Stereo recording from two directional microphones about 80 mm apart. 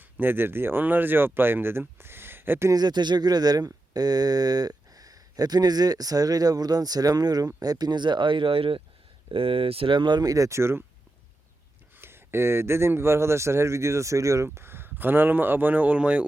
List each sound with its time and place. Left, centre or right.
0.0 s speech: right
2.7 s speech: right
9.8 s speech: right
11.9 s speech: right